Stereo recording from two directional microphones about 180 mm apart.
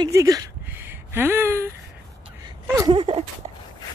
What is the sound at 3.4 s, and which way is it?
Dog, 30° right (ahead or behind).